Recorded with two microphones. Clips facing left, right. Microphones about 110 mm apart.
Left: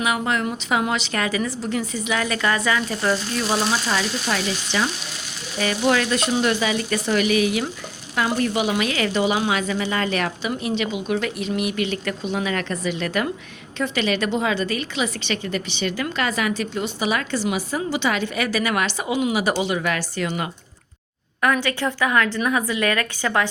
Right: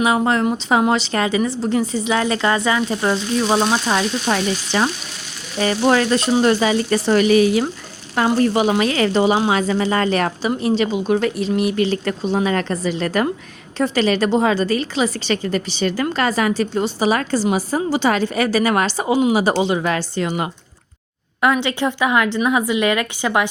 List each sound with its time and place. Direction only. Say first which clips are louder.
0.0 s a woman's voice: right 6 dB; 30° right (ahead or behind)